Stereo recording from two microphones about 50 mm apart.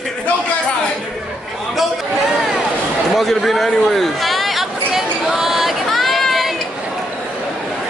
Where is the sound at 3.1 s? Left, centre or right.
Centre.